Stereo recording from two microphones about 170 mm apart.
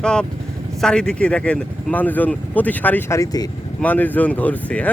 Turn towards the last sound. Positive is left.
turn(degrees=10)  # may be behind; listen again after turning